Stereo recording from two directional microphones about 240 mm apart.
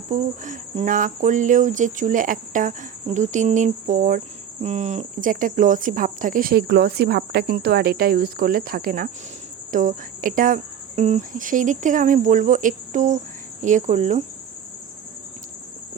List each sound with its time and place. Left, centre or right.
0.1 s speech: right